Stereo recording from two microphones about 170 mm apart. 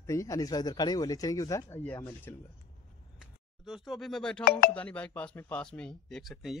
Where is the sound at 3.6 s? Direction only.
Centre (ahead or behind).